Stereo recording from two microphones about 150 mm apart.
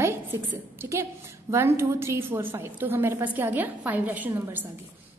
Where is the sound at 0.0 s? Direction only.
15° right (ahead or behind).